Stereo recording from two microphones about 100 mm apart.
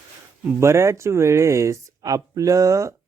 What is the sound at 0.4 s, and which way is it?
Speech, 25° right (ahead or behind).